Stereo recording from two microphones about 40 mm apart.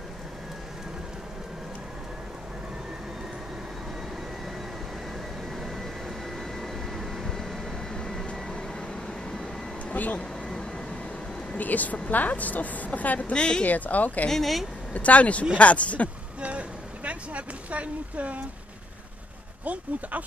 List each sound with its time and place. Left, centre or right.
5.6 s a sound: centre
7.9 s vehicle: centre
9.0 s vehicle: centre
9.9 s vehicle: left
11.5 s a woman's voice: left
13.3 s speech: left
13.7 s a woman's voice: left
14.3 s speech: centre
15.0 s a woman's voice: left
16.3 s a sound: right
19.6 s speech: right